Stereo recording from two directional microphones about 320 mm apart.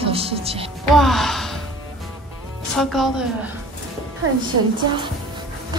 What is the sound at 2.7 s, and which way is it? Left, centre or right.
Speech, centre.